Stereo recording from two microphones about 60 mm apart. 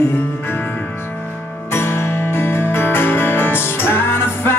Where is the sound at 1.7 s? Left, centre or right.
Left.